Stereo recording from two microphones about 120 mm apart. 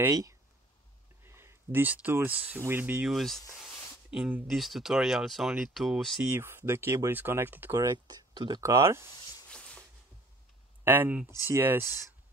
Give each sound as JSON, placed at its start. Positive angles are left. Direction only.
{"t": 0.1, "sound": "speech", "side_deg": -30}
{"t": 3.2, "sound": "speech", "side_deg": 0}
{"t": 3.5, "sound": "a sound", "side_deg": -5}
{"t": 4.5, "sound": "speech", "side_deg": 0}
{"t": 6.2, "sound": "speech", "side_deg": -20}
{"t": 7.7, "sound": "speech", "side_deg": -30}
{"t": 9.1, "sound": "speech", "side_deg": 35}
{"t": 9.5, "sound": "a sound", "side_deg": 10}
{"t": 10.8, "sound": "speech", "side_deg": -15}